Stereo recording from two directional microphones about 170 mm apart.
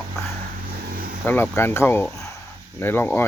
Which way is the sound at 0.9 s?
60° right (ahead or behind).